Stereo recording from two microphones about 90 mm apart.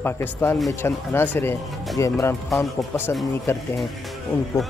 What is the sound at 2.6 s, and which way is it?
Speech, 25° left (ahead or behind).